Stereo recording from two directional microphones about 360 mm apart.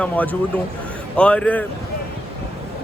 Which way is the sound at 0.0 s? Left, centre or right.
Centre.